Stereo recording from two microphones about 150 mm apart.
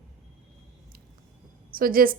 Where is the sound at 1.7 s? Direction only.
75° right (ahead or behind).